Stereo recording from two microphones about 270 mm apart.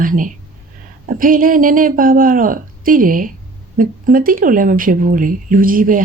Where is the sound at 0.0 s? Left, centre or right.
Right.